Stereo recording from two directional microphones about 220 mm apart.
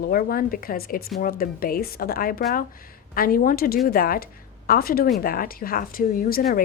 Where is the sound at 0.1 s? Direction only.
40° left (ahead or behind).